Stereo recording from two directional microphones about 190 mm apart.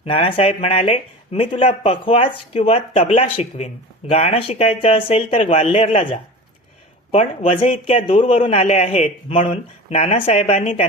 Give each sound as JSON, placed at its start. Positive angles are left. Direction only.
{"t": 0.0, "sound": "speech", "side_deg": 30}